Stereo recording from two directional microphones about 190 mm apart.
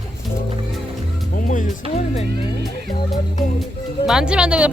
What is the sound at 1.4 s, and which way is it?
Speech, 45° left (ahead or behind).